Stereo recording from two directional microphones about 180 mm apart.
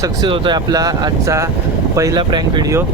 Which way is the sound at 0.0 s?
25° right (ahead or behind).